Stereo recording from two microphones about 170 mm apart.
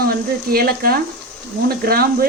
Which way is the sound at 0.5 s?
60° right (ahead or behind).